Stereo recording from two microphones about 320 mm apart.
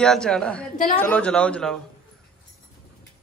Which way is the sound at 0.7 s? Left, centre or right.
Left.